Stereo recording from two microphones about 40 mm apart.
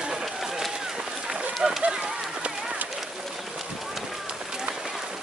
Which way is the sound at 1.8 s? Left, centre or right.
Right.